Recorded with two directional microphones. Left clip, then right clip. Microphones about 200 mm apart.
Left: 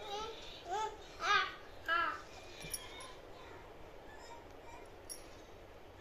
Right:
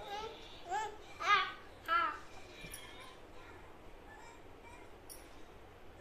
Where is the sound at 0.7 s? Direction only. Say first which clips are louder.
Even; 20° right (ahead or behind).